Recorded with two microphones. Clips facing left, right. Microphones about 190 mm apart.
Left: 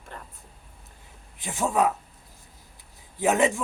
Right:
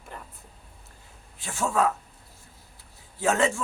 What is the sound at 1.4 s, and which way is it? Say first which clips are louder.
Speech: left 1 dB; 15° left (ahead or behind).